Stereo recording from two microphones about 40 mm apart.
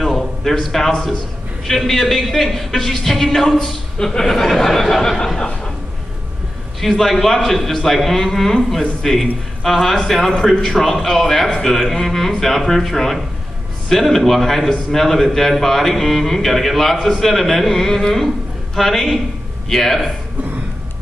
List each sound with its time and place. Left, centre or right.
0.0 s a sound: centre
1.9 s a man's voice: centre
6.8 s a man's voice: centre